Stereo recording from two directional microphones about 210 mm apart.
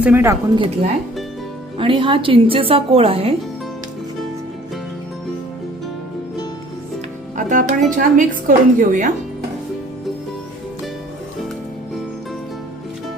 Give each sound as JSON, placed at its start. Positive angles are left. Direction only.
{"t": 0.0, "sound": "speech", "side_deg": -10}
{"t": 0.5, "sound": "a woman's voice", "side_deg": -25}
{"t": 7.3, "sound": "a woman's voice", "side_deg": -40}